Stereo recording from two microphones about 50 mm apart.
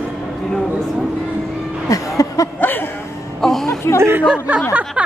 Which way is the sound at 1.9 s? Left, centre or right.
Left.